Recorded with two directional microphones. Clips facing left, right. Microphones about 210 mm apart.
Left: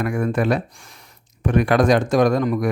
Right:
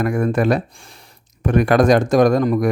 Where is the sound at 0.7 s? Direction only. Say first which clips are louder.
Right 2 dB; 30° right (ahead or behind).